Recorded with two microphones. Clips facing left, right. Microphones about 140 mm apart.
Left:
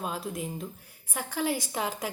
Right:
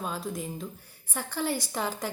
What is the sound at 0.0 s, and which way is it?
A woman's voice, centre (ahead or behind).